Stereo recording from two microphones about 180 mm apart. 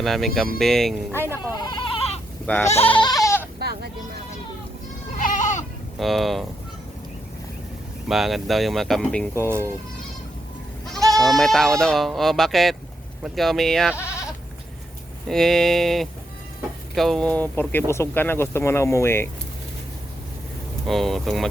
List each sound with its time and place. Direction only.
0.0 s speech: centre (ahead or behind)
1.1 s speech: 15° right (ahead or behind)
1.5 s goat: 25° left (ahead or behind)
2.5 s speech: 10° left (ahead or behind)
3.0 s goat: 20° left (ahead or behind)
3.6 s vehicle: 60° right (ahead or behind)
5.1 s goat: 45° left (ahead or behind)
6.0 s speech: centre (ahead or behind)
8.0 s speech: centre (ahead or behind)
10.8 s speech: centre (ahead or behind)
15.3 s speech: centre (ahead or behind)
20.8 s speech: centre (ahead or behind)